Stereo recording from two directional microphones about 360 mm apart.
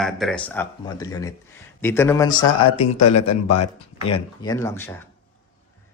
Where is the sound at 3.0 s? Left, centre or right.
Left.